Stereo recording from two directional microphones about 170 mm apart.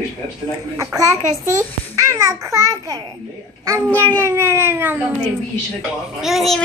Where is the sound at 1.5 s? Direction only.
20° right (ahead or behind).